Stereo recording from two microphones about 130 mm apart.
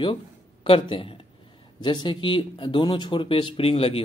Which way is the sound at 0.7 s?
40° left (ahead or behind).